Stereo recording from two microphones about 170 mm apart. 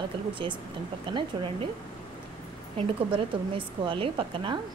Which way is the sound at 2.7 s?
30° right (ahead or behind).